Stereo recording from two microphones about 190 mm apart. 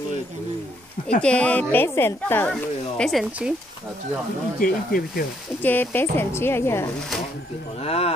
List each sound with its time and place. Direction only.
1.2 s speech: 5° left (ahead or behind)
2.5 s speech: centre (ahead or behind)
4.6 s speech: 50° left (ahead or behind)
5.6 s speech: 10° left (ahead or behind)
7.8 s speech: 30° left (ahead or behind)